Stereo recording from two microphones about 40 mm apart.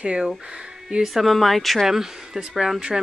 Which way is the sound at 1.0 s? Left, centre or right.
Centre.